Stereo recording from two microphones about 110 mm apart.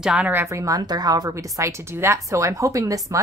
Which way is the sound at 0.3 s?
25° right (ahead or behind).